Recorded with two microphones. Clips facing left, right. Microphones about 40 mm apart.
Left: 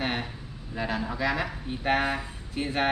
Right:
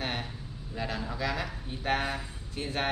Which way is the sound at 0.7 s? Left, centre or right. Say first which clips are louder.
Left 4 dB; centre.